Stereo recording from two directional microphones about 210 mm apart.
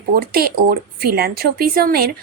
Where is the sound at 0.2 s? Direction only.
45° right (ahead or behind).